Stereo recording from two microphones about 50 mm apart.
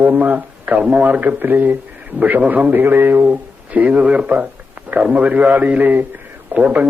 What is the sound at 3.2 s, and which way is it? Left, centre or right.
Speech, right.